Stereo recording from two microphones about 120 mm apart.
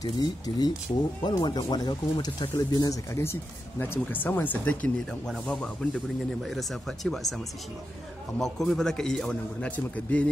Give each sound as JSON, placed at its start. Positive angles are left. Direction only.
{"t": 0.0, "sound": "a man's voice", "side_deg": 35}
{"t": 8.4, "sound": "a man's voice", "side_deg": 5}